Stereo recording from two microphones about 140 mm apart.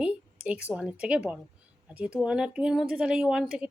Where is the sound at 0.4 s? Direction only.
10° right (ahead or behind).